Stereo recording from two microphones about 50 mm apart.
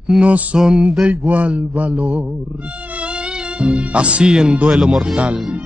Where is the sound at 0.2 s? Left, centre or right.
Right.